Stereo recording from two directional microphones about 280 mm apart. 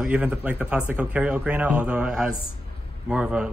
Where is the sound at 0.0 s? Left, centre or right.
Centre.